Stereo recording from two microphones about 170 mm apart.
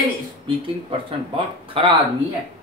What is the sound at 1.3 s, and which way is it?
Speech, 30° right (ahead or behind).